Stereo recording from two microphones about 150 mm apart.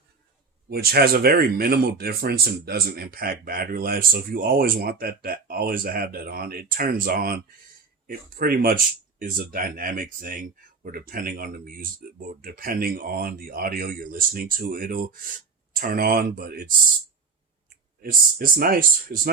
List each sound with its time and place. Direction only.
0.7 s speech: 90° right; by 16.7 s 75° right (ahead or behind)
18.0 s speech: 75° right (ahead or behind)